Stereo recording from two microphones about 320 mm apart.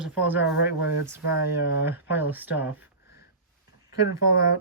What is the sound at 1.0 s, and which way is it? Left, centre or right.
Speech, centre.